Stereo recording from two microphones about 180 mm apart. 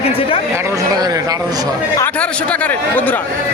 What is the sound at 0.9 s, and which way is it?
Speech, 20° right (ahead or behind).